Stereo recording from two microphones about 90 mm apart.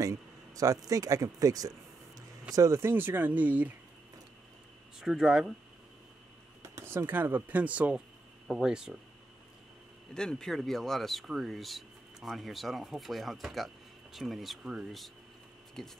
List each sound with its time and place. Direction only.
0.0 s speech: 40° right (ahead or behind)
2.9 s speech: 20° right (ahead or behind)
5.0 s speech: 5° right (ahead or behind)
6.6 s speech: 35° right (ahead or behind); by 8.0 s 15° right (ahead or behind)
8.5 s speech: 5° right (ahead or behind)
10.1 s speech: 5° left (ahead or behind)